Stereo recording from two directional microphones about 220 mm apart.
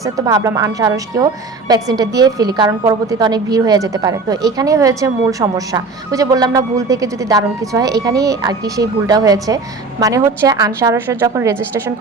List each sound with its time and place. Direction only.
0.0 s a woman's voice: 15° right (ahead or behind)